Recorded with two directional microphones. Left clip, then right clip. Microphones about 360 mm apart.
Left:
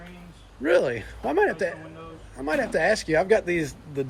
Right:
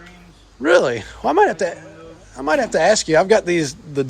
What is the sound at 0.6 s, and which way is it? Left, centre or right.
Speech, centre.